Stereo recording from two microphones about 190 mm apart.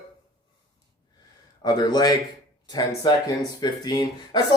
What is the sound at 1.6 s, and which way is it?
Speech, 20° left (ahead or behind).